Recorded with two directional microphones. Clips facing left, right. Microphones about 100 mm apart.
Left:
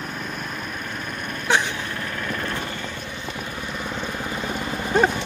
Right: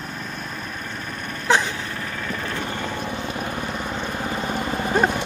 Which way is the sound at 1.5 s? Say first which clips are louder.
Right 2 dB; 40° right (ahead or behind).